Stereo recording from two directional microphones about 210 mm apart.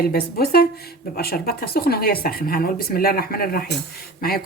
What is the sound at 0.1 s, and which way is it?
Speech, 45° left (ahead or behind).